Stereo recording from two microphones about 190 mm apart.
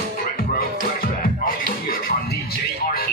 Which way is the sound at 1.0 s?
50° left (ahead or behind).